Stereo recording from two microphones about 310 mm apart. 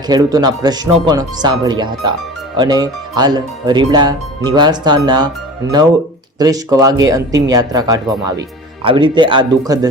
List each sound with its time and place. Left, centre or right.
0.1 s speech: centre
6.4 s speech: centre